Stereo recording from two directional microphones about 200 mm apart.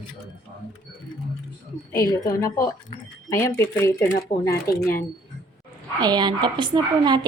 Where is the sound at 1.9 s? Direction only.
20° left (ahead or behind).